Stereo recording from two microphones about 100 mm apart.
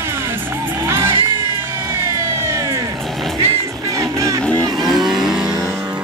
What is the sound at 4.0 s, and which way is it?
Music, 35° right (ahead or behind).